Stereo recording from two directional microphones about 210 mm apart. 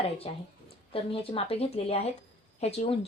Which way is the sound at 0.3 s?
30° left (ahead or behind).